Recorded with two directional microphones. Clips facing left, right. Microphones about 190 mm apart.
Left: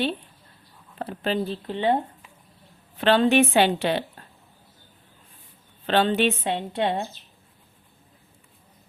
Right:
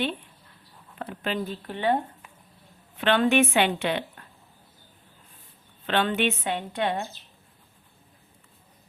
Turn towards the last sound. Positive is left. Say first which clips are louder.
# left 3 dB
turn(degrees=25)  # may be behind; listen again after turning